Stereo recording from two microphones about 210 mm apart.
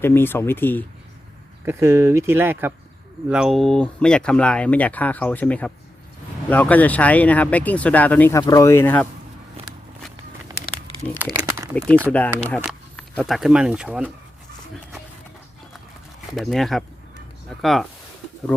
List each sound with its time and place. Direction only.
0.0 s speech: 10° left (ahead or behind)
1.6 s speech: 10° right (ahead or behind); by 9.0 s 10° left (ahead or behind)
11.3 s crumpling: 15° right (ahead or behind)
11.7 s speech: 5° left (ahead or behind)
16.3 s speech: centre (ahead or behind)